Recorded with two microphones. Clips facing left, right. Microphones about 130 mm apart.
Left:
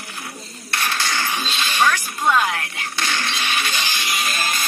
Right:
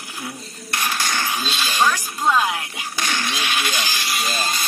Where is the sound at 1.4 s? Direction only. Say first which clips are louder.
Even; 5° right (ahead or behind).